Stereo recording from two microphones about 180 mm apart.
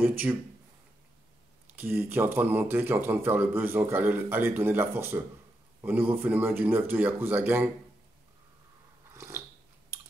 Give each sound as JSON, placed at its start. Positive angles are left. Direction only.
{"t": 0.0, "sound": "speech", "side_deg": -10}
{"t": 1.7, "sound": "speech", "side_deg": -10}
{"t": 9.1, "sound": "dog", "side_deg": -15}